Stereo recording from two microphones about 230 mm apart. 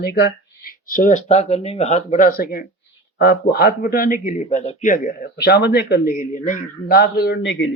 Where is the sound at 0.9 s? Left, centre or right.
Left.